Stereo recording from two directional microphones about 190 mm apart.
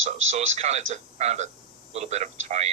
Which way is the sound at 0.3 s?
35° right (ahead or behind).